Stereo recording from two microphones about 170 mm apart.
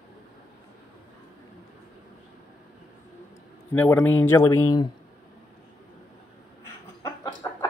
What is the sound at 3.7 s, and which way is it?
Speech, 10° left (ahead or behind).